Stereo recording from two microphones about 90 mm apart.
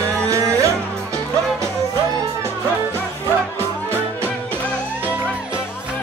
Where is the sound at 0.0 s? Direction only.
30° right (ahead or behind).